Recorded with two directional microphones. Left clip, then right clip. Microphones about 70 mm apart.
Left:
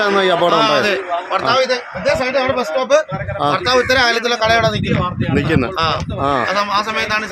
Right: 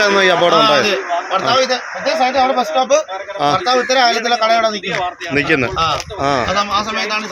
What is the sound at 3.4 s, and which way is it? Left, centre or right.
Speech, left.